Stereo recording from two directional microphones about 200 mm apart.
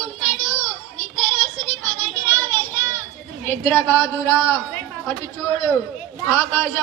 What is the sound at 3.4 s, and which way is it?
A woman's voice, 10° left (ahead or behind).